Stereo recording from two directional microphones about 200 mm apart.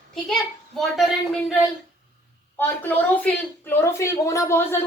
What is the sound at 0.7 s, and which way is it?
Speech, centre (ahead or behind).